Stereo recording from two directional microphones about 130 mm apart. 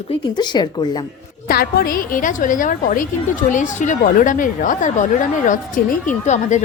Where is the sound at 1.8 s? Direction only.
90° left.